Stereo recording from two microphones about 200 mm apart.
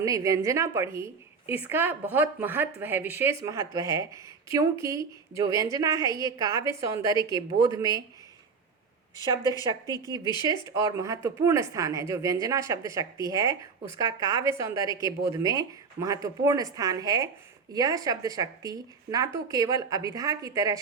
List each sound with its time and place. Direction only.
0.0 s a woman's voice: 15° right (ahead or behind)
10.8 s a woman's voice: 15° right (ahead or behind)